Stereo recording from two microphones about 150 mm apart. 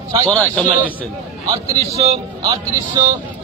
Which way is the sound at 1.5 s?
45° right (ahead or behind).